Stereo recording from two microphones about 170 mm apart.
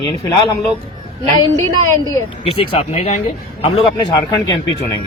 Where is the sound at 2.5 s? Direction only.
40° left (ahead or behind).